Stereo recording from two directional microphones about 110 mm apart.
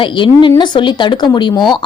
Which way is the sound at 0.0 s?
45° left (ahead or behind).